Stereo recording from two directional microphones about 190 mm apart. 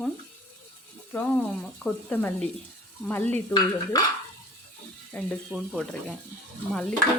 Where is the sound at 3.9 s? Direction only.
20° left (ahead or behind).